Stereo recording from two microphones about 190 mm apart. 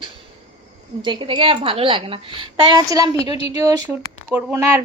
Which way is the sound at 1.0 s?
25° right (ahead or behind).